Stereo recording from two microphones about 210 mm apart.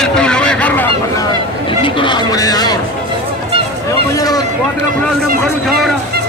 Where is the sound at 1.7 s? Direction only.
25° left (ahead or behind).